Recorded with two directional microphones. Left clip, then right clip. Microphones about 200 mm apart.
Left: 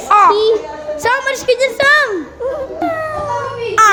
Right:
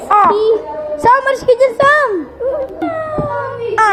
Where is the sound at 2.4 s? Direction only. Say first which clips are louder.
Right 3 dB; 25° left (ahead or behind).